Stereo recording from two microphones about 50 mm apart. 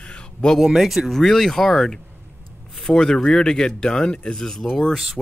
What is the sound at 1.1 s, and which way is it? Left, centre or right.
Speech, centre.